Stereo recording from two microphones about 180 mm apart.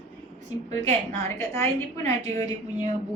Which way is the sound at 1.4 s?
15° left (ahead or behind).